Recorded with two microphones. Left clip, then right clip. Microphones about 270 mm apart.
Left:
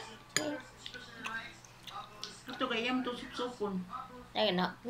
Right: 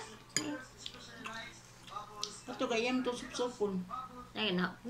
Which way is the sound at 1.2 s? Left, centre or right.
Centre.